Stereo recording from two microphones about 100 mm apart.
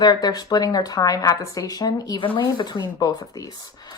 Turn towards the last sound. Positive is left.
turn(degrees=40)  # may be behind; listen again after turning